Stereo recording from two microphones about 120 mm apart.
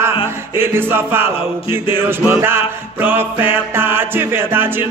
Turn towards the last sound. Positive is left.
turn(degrees=-20)  # may be behind; listen again after turning